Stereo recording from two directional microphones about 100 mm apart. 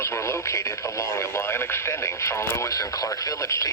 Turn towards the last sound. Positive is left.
turn(degrees=30)  # may be behind; listen again after turning